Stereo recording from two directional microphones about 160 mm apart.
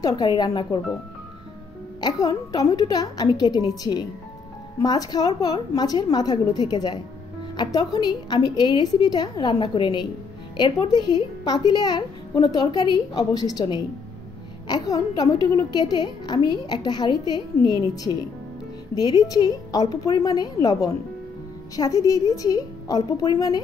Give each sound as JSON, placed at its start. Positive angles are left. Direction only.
{"t": 0.0, "sound": "a woman's voice", "side_deg": 25}
{"t": 2.0, "sound": "a woman's voice", "side_deg": 25}
{"t": 18.9, "sound": "a woman's voice", "side_deg": 25}